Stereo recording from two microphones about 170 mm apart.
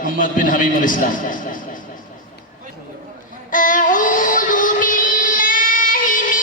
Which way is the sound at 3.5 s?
50° left (ahead or behind).